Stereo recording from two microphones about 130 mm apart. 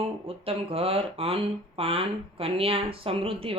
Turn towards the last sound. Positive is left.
turn(degrees=-45)  # may be behind; listen again after turning